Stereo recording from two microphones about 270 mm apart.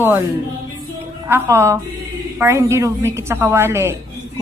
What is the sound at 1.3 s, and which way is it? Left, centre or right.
Speech, centre.